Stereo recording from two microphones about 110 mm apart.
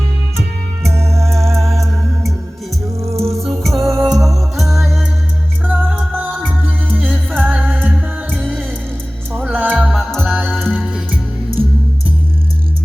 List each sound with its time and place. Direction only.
1.5 s music: centre (ahead or behind)
3.0 s music: 25° right (ahead or behind)
3.6 s music: centre (ahead or behind)
3.8 s music: 25° right (ahead or behind)
4.1 s music: 5° right (ahead or behind)
5.6 s music: 15° right (ahead or behind)
7.0 s music: 5° left (ahead or behind)
9.5 s music: 15° right (ahead or behind)
9.9 s music: 5° left (ahead or behind)
10.8 s music: 10° right (ahead or behind)